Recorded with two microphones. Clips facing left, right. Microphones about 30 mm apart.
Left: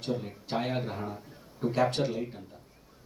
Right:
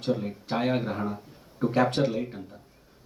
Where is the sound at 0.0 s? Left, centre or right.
Right.